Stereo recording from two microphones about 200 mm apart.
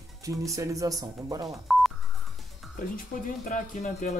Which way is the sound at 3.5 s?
40° left (ahead or behind).